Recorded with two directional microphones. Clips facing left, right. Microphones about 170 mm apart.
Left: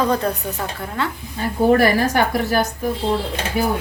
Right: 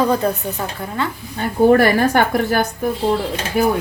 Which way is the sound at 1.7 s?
55° right (ahead or behind).